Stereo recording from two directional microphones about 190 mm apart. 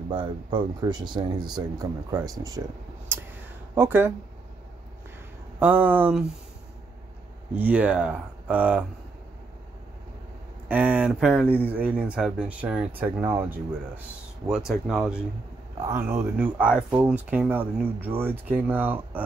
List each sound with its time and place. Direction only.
0.1 s speech: 25° right (ahead or behind)
3.1 s a sound: 10° right (ahead or behind)
3.7 s speech: 10° right (ahead or behind)
5.6 s speech: 10° right (ahead or behind)
7.5 s speech: 5° right (ahead or behind)
10.7 s speech: 10° right (ahead or behind)